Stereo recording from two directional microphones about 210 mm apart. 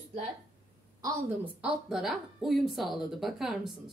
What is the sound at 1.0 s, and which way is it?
A woman's voice, 5° right (ahead or behind).